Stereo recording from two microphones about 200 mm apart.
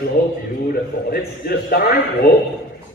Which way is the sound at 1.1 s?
50° left (ahead or behind).